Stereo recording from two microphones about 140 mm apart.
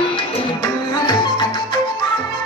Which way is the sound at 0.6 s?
30° left (ahead or behind).